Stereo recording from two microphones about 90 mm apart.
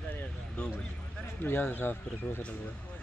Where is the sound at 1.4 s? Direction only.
25° left (ahead or behind).